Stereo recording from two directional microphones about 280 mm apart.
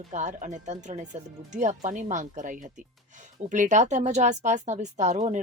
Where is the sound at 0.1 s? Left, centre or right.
Right.